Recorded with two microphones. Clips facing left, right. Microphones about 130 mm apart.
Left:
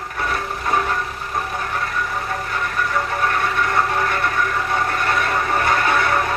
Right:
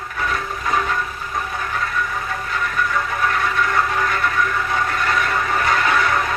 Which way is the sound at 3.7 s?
35° left (ahead or behind).